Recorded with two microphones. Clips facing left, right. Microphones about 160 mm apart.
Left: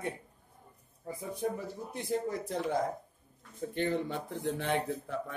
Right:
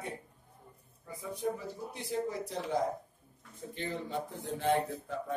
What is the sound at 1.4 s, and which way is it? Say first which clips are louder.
Speech: even; 50° left (ahead or behind).